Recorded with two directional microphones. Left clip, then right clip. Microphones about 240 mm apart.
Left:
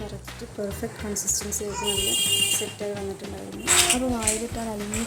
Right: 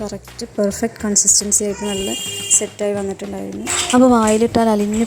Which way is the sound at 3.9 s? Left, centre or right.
Right.